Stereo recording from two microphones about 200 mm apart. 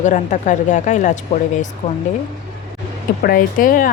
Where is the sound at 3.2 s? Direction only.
45° left (ahead or behind).